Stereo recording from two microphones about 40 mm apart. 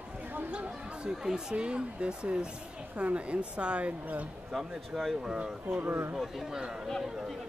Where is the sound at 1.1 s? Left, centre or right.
Centre.